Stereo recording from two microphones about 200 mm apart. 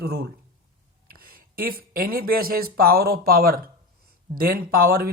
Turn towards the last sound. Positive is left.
turn(degrees=-45)  # may be behind; listen again after turning